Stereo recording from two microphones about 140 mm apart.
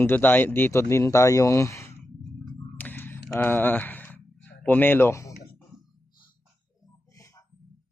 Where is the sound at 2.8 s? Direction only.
15° left (ahead or behind).